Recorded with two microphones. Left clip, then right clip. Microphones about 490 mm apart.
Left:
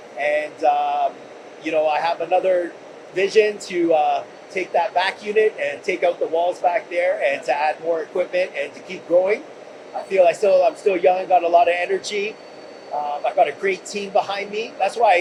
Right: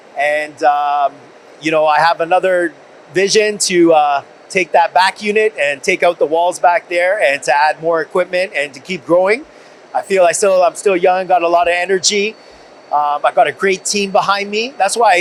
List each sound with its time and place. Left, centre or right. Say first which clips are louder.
0.2 s mantra: right 6 dB; right
1.6 s a man's voice: right 8 dB; right
13.2 s speech: right 2 dB; right